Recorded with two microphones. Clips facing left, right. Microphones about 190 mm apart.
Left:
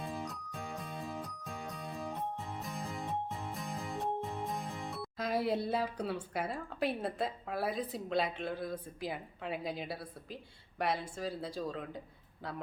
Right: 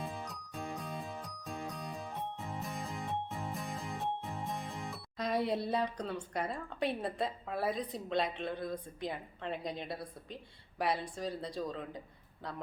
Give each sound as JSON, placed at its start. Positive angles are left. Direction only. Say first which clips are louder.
{"t": 0.0, "sound": "music", "louder": "left 2 dB", "side_deg": 0}
{"t": 10.8, "sound": "speech", "louder": "even", "side_deg": 0}